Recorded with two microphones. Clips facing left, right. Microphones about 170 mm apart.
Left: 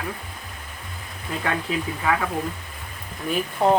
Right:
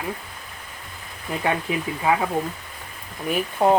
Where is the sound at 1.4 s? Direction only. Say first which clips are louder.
Right 2 dB; 20° right (ahead or behind).